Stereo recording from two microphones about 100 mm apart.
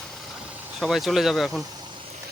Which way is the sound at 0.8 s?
Centre (ahead or behind).